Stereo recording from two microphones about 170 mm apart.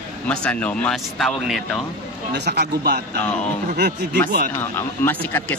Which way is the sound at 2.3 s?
75° right (ahead or behind).